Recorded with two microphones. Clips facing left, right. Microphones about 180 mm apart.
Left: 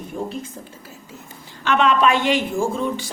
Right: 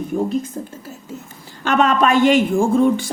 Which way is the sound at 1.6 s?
45° right (ahead or behind).